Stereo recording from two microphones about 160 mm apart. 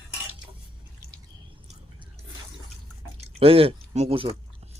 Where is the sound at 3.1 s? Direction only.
35° right (ahead or behind).